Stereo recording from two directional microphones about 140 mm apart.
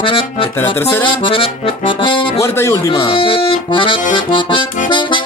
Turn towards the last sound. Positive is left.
turn(degrees=35)  # may be behind; listen again after turning